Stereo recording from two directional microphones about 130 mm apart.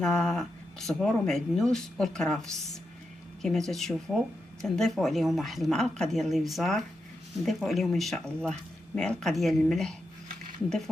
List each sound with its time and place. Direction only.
0.0 s speech: 5° left (ahead or behind)
3.4 s speech: 5° left (ahead or behind)